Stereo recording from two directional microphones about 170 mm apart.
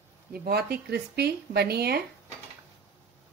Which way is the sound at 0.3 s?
65° right (ahead or behind).